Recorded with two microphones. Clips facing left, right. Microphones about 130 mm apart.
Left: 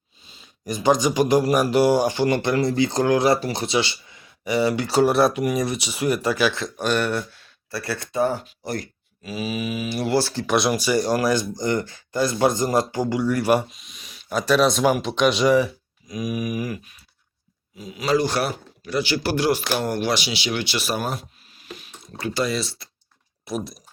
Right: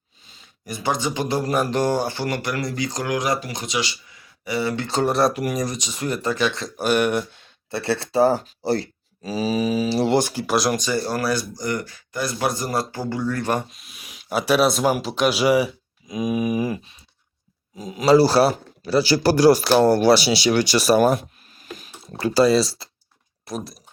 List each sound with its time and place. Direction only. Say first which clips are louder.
0.4 s speech: left 6 dB; 20° left (ahead or behind)
6.7 s speech: right 7 dB; 10° right (ahead or behind); by 13.7 s 10° left (ahead or behind)
13.7 s speech: right 1 dB; centre (ahead or behind)
16.0 s a sound: right 4 dB; 25° right (ahead or behind)
17.7 s speech: right 6 dB; 40° right (ahead or behind)
23.5 s speech: left 2 dB; centre (ahead or behind)